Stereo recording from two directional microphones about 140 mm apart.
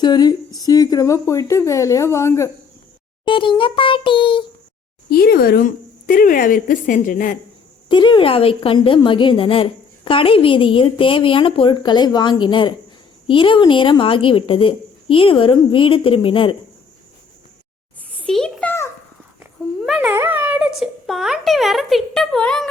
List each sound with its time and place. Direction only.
0.0 s a woman's voice: 30° left (ahead or behind)
3.2 s a child's voice: 35° left (ahead or behind)
5.0 s speech: 90° left; by 7.3 s 70° left (ahead or behind)
7.9 s a woman's voice: 35° left (ahead or behind)
18.2 s a sound: 5° left (ahead or behind)
19.8 s a sound: 10° right (ahead or behind)